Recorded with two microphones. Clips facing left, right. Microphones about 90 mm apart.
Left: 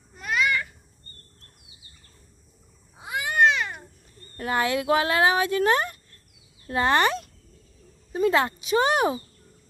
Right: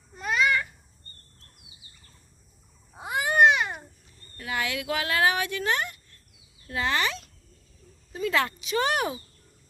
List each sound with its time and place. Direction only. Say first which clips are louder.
0.2 s babbling: right 1 dB; centre (ahead or behind)
3.0 s babbling: right 2 dB; 35° right (ahead or behind)
3.3 s babbling: right 1 dB; 20° right (ahead or behind)
4.4 s speech: left 6 dB; 40° left (ahead or behind)
8.1 s speech: left 5 dB; 30° left (ahead or behind)